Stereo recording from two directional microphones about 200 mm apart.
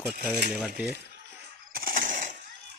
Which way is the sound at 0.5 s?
5° right (ahead or behind).